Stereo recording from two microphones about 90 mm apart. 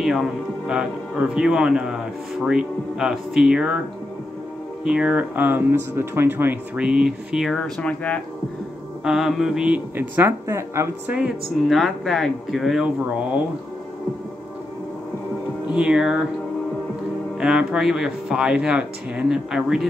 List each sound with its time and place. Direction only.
0.0 s speech: centre (ahead or behind)
4.8 s speech: 10° right (ahead or behind)
6.8 s speech: 5° right (ahead or behind); by 8.2 s 15° left (ahead or behind)
9.0 s speech: 5° right (ahead or behind)
9.9 s speech: 20° right (ahead or behind)
11.1 s speech: 15° right (ahead or behind)
11.6 s speech: centre (ahead or behind)
15.7 s speech: 10° right (ahead or behind)
17.4 s speech: 10° right (ahead or behind)